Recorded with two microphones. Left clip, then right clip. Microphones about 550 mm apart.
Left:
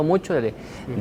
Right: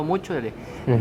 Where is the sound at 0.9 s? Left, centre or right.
Right.